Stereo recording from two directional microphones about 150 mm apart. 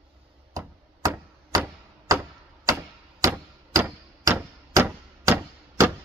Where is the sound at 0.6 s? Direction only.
20° right (ahead or behind).